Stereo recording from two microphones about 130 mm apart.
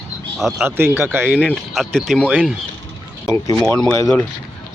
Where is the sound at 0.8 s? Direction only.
15° right (ahead or behind).